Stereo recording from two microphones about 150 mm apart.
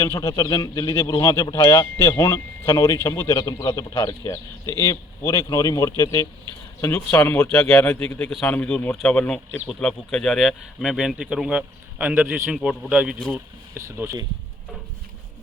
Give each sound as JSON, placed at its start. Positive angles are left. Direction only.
{"t": 0.0, "sound": "a man's voice", "side_deg": 20}
{"t": 13.7, "sound": "speech", "side_deg": -15}